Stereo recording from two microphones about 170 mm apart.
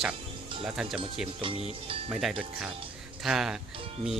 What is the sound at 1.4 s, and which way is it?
Speech, 30° right (ahead or behind).